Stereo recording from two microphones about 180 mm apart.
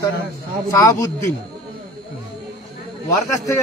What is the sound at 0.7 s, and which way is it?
Speech, 20° left (ahead or behind).